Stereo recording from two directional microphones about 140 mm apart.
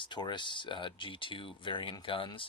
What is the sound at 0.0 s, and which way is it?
Speech, 35° left (ahead or behind).